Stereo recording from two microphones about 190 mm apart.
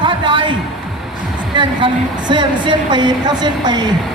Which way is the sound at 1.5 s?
25° right (ahead or behind).